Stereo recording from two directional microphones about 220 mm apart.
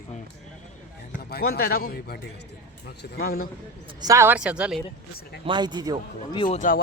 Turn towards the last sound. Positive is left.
turn(degrees=40)  # may be behind; listen again after turning